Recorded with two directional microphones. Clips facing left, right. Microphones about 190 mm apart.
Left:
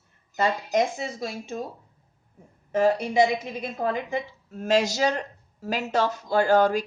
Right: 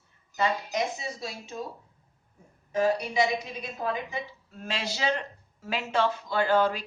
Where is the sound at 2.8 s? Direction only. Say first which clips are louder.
Left 5 dB; 50° left (ahead or behind).